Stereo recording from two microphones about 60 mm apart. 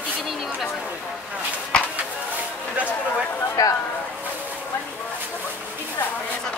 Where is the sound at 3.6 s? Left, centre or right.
Left.